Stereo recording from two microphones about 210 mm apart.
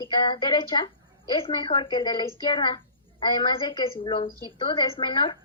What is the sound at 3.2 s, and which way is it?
A woman's voice, 20° left (ahead or behind).